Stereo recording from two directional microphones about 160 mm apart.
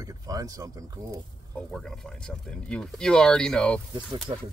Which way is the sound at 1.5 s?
5° left (ahead or behind).